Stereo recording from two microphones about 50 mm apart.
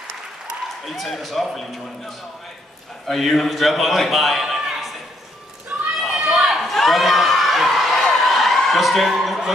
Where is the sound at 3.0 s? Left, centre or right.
Centre.